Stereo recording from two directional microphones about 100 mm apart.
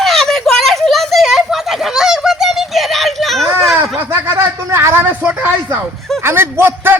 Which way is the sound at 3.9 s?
25° right (ahead or behind).